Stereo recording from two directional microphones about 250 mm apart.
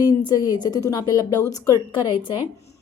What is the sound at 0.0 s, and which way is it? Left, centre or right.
A woman's voice, centre.